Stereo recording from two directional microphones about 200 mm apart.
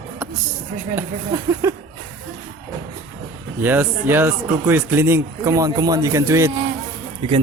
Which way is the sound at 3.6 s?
10° right (ahead or behind).